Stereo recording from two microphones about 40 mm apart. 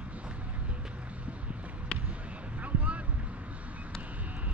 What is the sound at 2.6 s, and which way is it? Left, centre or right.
Boat, right.